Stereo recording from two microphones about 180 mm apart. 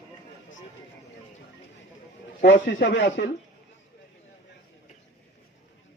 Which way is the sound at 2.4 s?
60° left (ahead or behind).